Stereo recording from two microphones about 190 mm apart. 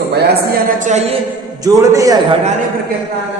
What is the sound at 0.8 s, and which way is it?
Speech, 35° right (ahead or behind).